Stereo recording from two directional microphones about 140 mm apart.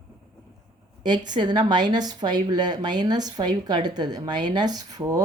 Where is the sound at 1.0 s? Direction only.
30° right (ahead or behind).